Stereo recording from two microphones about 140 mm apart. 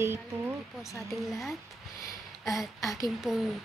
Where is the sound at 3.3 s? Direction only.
Centre (ahead or behind).